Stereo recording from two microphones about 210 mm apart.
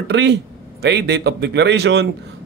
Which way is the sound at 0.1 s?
55° right (ahead or behind).